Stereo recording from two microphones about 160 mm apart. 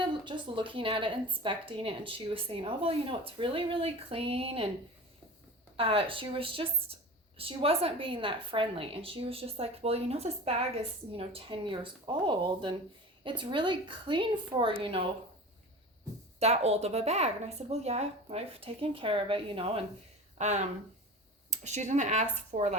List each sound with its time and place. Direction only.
0.1 s speech: 30° right (ahead or behind)
5.7 s speech: 35° right (ahead or behind)
16.4 s speech: 40° right (ahead or behind)
20.4 s speech: 45° right (ahead or behind)